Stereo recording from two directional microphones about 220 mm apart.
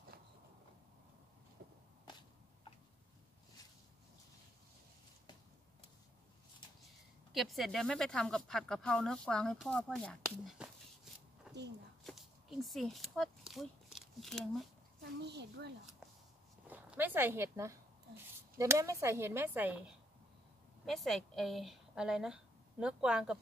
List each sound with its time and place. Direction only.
7.3 s speech: centre (ahead or behind)
11.5 s a sound: 5° right (ahead or behind)
15.0 s a woman's voice: 45° right (ahead or behind)
16.6 s a woman's voice: 5° right (ahead or behind)